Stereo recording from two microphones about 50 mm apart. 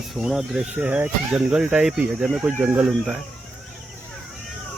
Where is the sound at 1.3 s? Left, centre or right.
Centre.